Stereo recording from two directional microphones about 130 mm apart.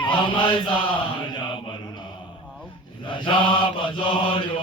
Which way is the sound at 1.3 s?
35° left (ahead or behind).